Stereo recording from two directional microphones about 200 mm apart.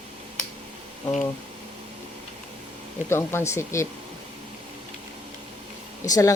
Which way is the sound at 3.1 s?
10° left (ahead or behind).